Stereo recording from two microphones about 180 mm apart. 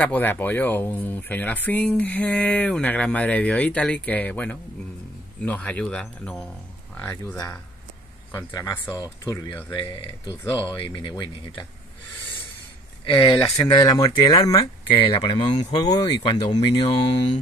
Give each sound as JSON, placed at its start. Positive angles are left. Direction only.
{"t": 0.0, "sound": "speech", "side_deg": 10}
{"t": 8.5, "sound": "speech", "side_deg": 20}
{"t": 13.0, "sound": "speech", "side_deg": 25}